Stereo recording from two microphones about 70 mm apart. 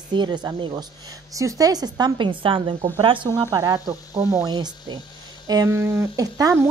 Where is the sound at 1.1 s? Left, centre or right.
Right.